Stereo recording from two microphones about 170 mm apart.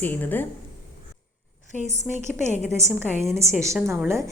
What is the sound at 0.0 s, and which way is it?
Speech, 10° left (ahead or behind).